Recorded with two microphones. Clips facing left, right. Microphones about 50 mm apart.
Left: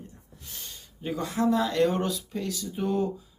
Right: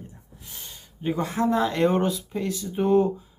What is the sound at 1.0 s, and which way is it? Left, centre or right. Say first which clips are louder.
Speech: right 2 dB; right.